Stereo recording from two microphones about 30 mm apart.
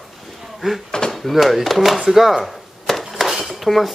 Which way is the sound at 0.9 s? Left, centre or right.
Left.